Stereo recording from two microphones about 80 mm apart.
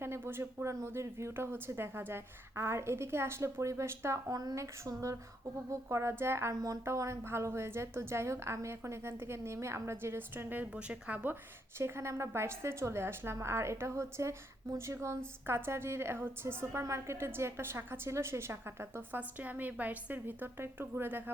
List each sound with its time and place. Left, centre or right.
0.0 s speech: right
4.3 s a sound: right
5.7 s speech: right
10.7 s speech: centre
11.8 s speech: right
19.4 s a woman's voice: right